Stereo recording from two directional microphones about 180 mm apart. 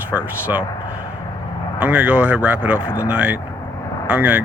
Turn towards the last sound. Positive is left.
turn(degrees=-10)  # may be behind; listen again after turning